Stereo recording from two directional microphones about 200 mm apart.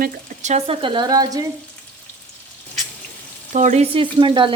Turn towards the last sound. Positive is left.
turn(degrees=-25)  # may be behind; listen again after turning